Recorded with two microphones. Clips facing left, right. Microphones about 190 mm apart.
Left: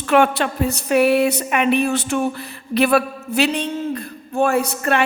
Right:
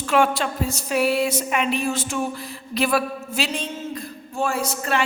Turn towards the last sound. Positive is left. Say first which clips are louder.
# left 5 dB
turn(degrees=60)  # may be behind; listen again after turning